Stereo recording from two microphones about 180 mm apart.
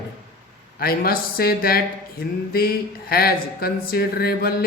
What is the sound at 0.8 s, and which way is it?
Speech, 55° left (ahead or behind).